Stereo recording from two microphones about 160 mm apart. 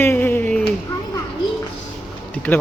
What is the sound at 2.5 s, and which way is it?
Speech, 5° left (ahead or behind).